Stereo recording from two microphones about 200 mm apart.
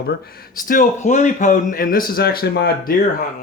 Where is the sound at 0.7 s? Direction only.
40° left (ahead or behind).